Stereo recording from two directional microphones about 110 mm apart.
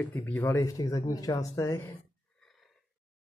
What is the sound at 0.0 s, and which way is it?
Speech, 15° left (ahead or behind).